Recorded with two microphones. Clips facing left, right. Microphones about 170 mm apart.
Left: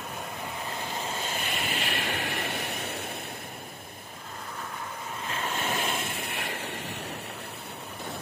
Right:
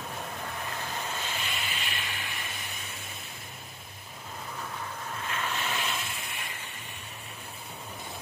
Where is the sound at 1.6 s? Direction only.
65° left (ahead or behind).